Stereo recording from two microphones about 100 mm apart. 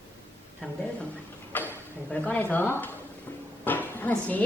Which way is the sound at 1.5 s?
20° left (ahead or behind).